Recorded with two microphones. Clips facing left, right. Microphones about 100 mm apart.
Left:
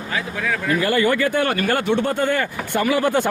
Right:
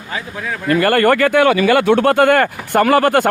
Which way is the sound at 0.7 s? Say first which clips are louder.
Right 7 dB; 65° right (ahead or behind).